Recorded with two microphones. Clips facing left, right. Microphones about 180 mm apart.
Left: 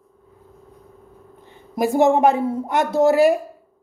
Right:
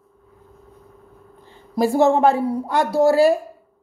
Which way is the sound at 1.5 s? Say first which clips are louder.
Right 1 dB; 20° left (ahead or behind).